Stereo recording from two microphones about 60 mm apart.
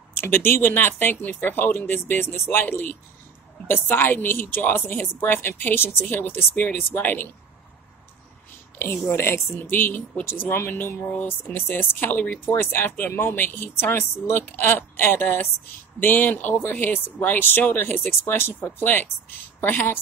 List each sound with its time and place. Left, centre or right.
0.2 s speech: left
2.6 s speech: left
8.7 s a woman's voice: left
9.7 s speech: left
13.9 s speech: left
14.4 s speech: left